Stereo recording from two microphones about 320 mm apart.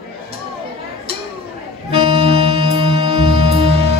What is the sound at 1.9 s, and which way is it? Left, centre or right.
Music, centre.